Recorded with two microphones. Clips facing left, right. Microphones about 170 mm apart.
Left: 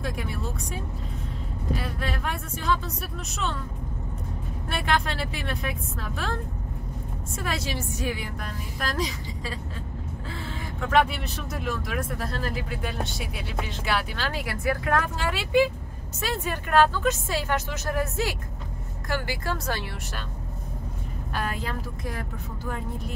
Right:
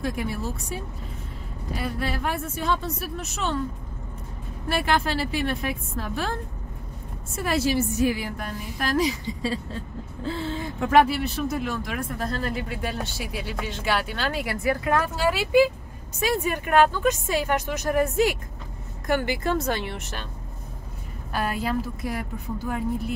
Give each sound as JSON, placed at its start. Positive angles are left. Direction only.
{"t": 0.0, "sound": "speech", "side_deg": 0}
{"t": 1.8, "sound": "speech", "side_deg": -5}
{"t": 4.6, "sound": "speech", "side_deg": -5}
{"t": 7.3, "sound": "speech", "side_deg": -5}
{"t": 10.2, "sound": "vehicle", "side_deg": -25}
{"t": 10.9, "sound": "a woman's voice", "side_deg": -5}
{"t": 21.3, "sound": "speech", "side_deg": -5}